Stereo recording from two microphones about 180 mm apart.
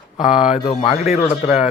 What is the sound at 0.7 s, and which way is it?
Speech, 35° left (ahead or behind).